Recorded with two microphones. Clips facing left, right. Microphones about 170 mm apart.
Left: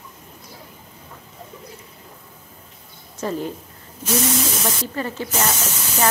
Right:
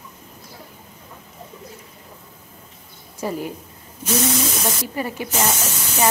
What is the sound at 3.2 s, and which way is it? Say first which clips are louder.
Speech: left 1 dB; 10° right (ahead or behind).